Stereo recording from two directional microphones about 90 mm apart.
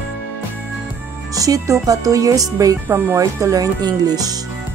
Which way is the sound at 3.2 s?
40° right (ahead or behind).